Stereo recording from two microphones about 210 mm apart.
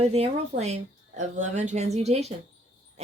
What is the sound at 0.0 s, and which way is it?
A woman's voice, 30° right (ahead or behind).